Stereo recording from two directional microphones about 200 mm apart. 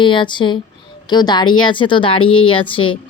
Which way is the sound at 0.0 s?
25° left (ahead or behind).